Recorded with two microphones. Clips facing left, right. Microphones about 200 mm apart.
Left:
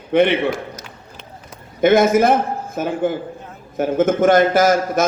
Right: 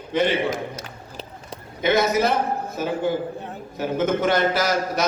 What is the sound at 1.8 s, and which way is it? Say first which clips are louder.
A man's voice: left 7 dB; 50° left (ahead or behind).